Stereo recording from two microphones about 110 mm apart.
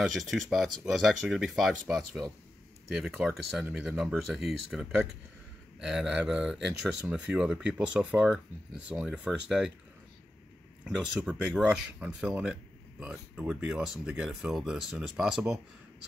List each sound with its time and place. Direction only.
0.0 s speech: centre (ahead or behind)
10.8 s speech: 5° right (ahead or behind)